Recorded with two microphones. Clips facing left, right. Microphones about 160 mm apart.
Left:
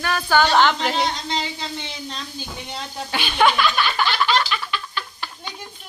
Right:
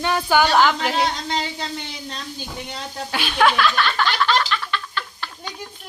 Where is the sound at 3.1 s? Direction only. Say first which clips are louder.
Even; centre (ahead or behind).